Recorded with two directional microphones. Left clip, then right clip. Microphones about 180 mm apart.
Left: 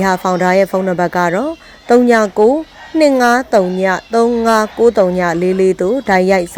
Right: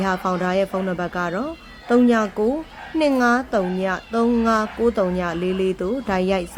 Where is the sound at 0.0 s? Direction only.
25° left (ahead or behind).